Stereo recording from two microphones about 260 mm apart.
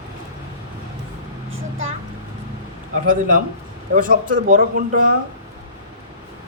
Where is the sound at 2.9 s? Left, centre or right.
Right.